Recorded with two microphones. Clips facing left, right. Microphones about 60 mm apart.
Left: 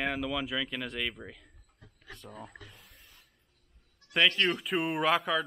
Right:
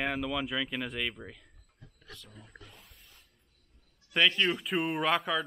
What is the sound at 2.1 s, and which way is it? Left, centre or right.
Speech, left.